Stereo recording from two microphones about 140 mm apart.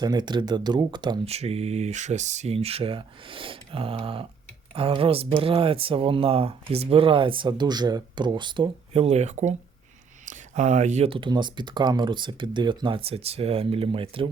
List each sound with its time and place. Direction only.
0.0 s speech: 30° right (ahead or behind)
1.2 s speech: 45° right (ahead or behind)